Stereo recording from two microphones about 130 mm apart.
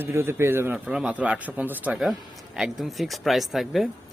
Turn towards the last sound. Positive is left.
turn(degrees=0)  # may be behind; listen again after turning